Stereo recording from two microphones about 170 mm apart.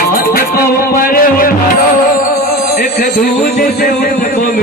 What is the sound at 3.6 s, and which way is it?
Speech, 60° left (ahead or behind).